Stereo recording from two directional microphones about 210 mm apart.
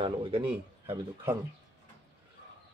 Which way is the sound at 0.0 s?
25° right (ahead or behind).